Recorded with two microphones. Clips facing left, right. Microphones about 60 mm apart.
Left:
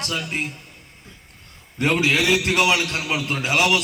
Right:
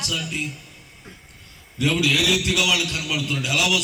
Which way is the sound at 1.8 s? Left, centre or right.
Left.